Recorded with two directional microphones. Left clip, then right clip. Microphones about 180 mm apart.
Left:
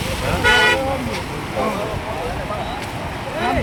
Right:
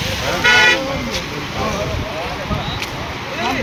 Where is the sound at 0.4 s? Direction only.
50° left (ahead or behind).